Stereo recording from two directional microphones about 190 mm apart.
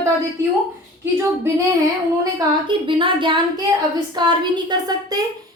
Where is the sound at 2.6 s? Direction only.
25° right (ahead or behind).